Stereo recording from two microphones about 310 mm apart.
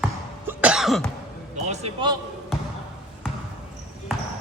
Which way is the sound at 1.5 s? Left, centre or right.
Right.